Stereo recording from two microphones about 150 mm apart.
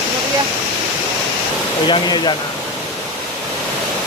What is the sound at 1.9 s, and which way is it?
Speech, 30° left (ahead or behind).